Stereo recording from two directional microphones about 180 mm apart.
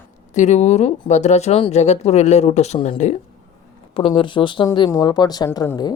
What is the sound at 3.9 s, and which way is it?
Speech, 30° left (ahead or behind).